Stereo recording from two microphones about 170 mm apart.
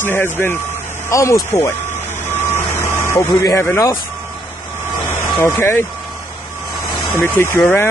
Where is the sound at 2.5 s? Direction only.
15° left (ahead or behind).